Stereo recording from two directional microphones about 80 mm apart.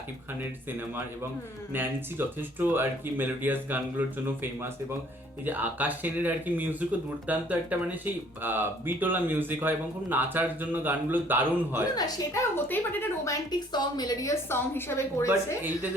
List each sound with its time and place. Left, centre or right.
1.7 s speech: right
5.5 s speech: right
11.9 s a woman's voice: left
12.3 s a woman's voice: left
12.6 s speech: left
13.5 s a woman's voice: left
14.5 s a woman's voice: left